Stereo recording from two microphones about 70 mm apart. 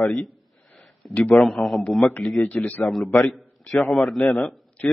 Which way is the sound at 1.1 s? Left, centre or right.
Centre.